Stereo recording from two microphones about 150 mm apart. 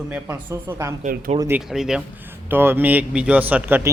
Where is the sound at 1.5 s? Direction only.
5° right (ahead or behind).